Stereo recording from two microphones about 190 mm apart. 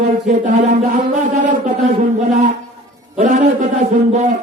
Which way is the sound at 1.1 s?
40° right (ahead or behind).